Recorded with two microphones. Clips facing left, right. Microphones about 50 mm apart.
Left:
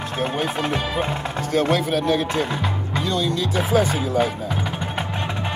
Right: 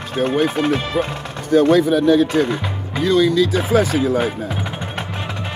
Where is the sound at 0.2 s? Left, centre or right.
Centre.